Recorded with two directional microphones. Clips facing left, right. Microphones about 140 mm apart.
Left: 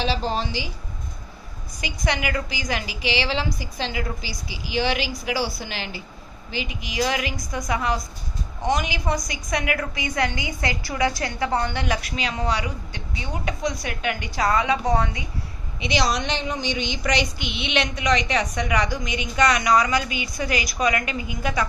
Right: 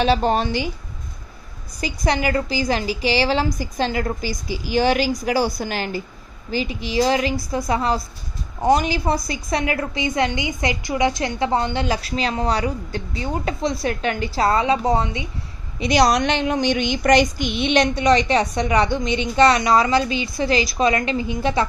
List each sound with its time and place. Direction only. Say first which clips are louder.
0.0 s a woman's voice: right 7 dB; 60° right (ahead or behind)
1.8 s a woman's voice: right 5 dB; 35° right (ahead or behind)
15.8 s speech: right 7 dB; 50° right (ahead or behind); by 21.6 s 30° right (ahead or behind)